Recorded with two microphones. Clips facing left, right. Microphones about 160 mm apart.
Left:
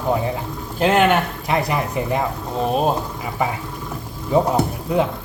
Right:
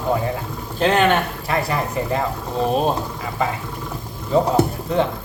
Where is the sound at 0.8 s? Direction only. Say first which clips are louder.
Left 1 dB; 10° left (ahead or behind).